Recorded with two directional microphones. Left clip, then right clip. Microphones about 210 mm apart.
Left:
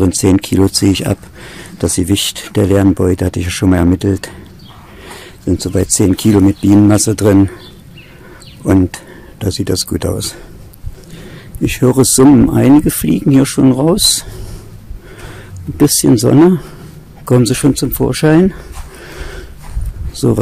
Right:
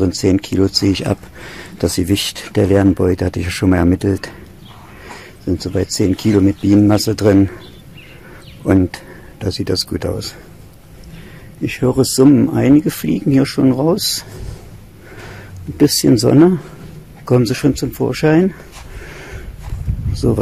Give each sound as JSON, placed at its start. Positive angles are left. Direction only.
{"t": 0.0, "sound": "speech", "side_deg": 25}
{"t": 5.4, "sound": "speech", "side_deg": 25}
{"t": 8.6, "sound": "speech", "side_deg": 15}
{"t": 11.6, "sound": "speech", "side_deg": 35}
{"t": 15.8, "sound": "speech", "side_deg": 10}
{"t": 19.1, "sound": "dog", "side_deg": 20}
{"t": 20.2, "sound": "speech", "side_deg": 20}